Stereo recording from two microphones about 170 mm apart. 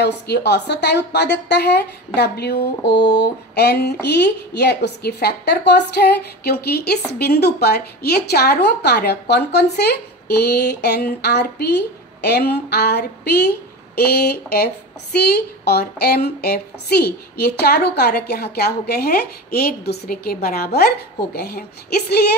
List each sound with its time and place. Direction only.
0.0 s a woman's voice: 80° left